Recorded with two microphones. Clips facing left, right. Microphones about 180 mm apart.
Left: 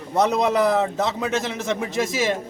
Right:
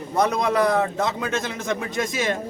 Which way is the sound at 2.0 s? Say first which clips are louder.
Left 3 dB; centre (ahead or behind).